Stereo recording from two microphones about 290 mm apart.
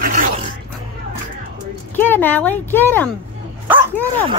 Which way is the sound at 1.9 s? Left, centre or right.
Centre.